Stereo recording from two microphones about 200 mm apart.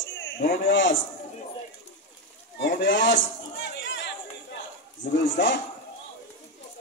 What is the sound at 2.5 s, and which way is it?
Speech, 60° left (ahead or behind).